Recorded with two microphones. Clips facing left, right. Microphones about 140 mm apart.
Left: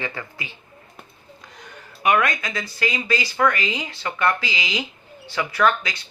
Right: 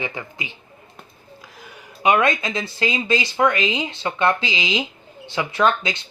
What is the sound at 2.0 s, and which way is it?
Speech, 25° right (ahead or behind).